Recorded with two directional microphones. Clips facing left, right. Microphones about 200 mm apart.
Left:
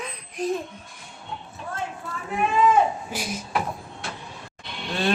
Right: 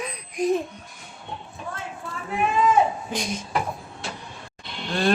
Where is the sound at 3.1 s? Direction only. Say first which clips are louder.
Right 2 dB; 5° left (ahead or behind).